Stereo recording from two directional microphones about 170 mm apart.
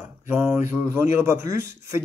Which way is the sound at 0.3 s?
15° right (ahead or behind).